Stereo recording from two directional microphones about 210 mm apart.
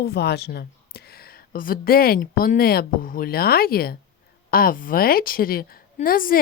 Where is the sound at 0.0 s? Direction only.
50° left (ahead or behind).